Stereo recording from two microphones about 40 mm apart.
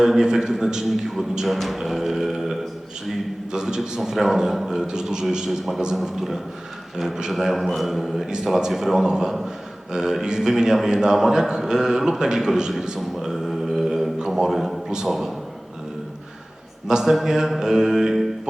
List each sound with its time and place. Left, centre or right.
0.0 s a man's voice: centre
5.5 s a man's voice: centre
13.0 s a sound: centre
14.3 s a man's voice: centre
16.9 s a man's voice: centre